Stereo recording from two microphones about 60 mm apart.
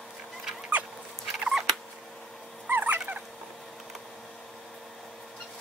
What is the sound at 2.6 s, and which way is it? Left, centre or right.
Dog, right.